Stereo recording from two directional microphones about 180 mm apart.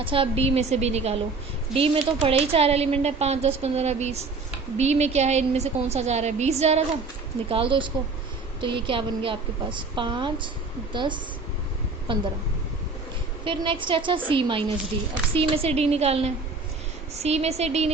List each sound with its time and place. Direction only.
0.0 s a woman's voice: 30° right (ahead or behind)
13.4 s a woman's voice: 30° right (ahead or behind)